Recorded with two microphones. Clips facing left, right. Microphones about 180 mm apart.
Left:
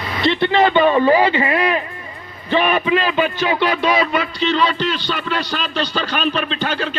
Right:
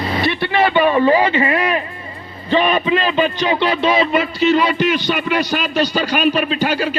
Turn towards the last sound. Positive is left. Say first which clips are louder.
# right 4 dB
turn(degrees=-10)  # may be behind; listen again after turning